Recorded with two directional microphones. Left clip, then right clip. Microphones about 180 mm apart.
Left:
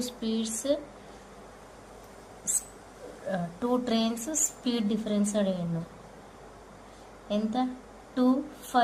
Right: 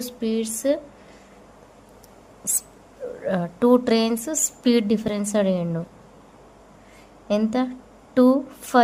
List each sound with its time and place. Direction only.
0.0 s speech: 55° right (ahead or behind)
3.2 s speech: 65° right (ahead or behind)
7.3 s a woman's voice: 65° right (ahead or behind)